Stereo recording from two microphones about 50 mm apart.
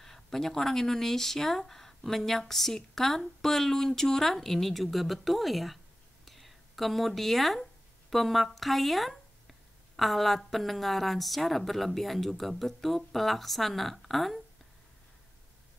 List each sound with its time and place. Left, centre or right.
0.0 s speech: centre
6.2 s a sound: centre
8.1 s speech: centre